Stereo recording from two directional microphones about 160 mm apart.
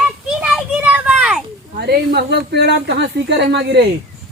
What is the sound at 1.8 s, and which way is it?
A woman's voice, 80° right.